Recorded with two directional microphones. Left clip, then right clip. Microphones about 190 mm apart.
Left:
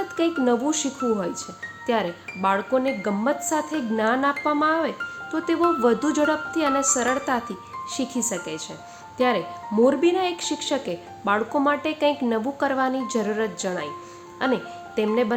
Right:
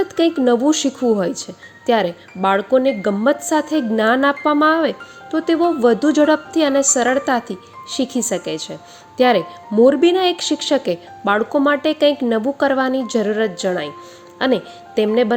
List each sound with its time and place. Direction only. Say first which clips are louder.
0.2 s speech: right 6 dB; 25° right (ahead or behind)